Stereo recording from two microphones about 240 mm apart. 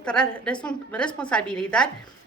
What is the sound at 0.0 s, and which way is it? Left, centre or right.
A woman's voice, centre.